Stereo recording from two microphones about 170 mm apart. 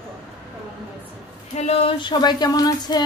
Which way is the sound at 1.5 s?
35° left (ahead or behind).